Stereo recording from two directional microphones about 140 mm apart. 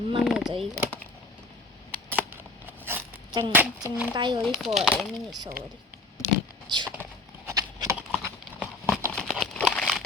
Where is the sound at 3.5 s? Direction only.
10° right (ahead or behind).